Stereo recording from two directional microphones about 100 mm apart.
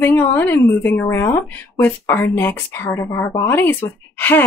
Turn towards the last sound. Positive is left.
turn(degrees=20)  # may be behind; listen again after turning